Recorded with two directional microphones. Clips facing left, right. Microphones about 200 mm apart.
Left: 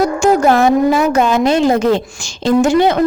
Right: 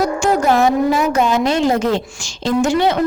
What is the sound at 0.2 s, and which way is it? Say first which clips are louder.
A woman's voice: left 4 dB; 55° left (ahead or behind).